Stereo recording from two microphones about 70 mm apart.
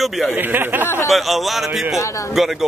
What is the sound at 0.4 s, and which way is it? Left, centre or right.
Speech, right.